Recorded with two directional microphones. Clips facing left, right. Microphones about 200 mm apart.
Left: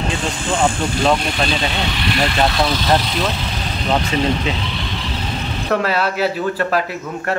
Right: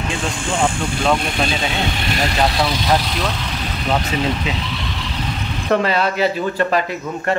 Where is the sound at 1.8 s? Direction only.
45° right (ahead or behind).